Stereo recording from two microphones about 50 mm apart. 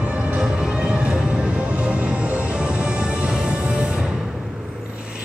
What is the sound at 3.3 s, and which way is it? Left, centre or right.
Music, centre.